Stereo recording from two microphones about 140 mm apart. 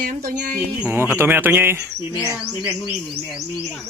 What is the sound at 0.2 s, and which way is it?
Speech, 85° right.